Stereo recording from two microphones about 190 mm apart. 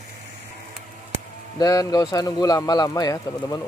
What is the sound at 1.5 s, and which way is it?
A man's voice, 20° left (ahead or behind).